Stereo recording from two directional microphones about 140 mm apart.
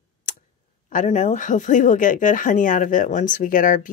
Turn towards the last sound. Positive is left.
turn(degrees=70)  # may be behind; listen again after turning